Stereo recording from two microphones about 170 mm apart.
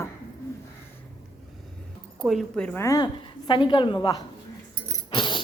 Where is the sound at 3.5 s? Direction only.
30° left (ahead or behind).